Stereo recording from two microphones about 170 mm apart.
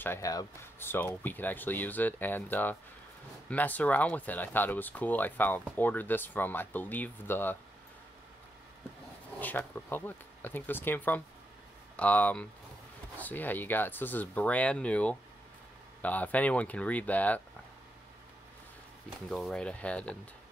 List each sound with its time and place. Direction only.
0.0 s speech: 15° left (ahead or behind)
9.4 s speech: 10° left (ahead or behind)
19.2 s speech: centre (ahead or behind)